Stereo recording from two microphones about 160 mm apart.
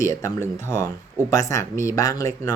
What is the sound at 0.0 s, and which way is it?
Speech, 20° left (ahead or behind).